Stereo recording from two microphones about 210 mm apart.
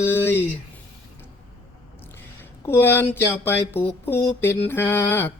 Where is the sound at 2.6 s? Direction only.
10° left (ahead or behind).